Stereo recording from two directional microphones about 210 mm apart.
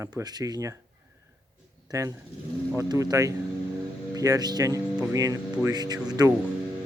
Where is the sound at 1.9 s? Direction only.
15° right (ahead or behind).